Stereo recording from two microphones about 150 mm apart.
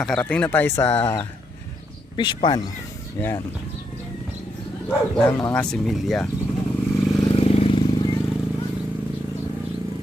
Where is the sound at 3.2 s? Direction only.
20° left (ahead or behind).